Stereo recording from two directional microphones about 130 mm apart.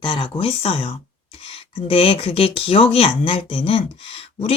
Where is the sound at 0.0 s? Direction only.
40° left (ahead or behind).